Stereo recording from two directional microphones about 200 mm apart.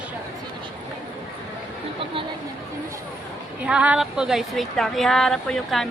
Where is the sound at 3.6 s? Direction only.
5° right (ahead or behind).